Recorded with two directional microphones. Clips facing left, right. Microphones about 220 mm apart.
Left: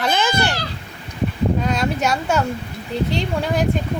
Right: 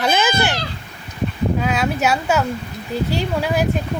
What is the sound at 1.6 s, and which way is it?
Speech, 5° right (ahead or behind).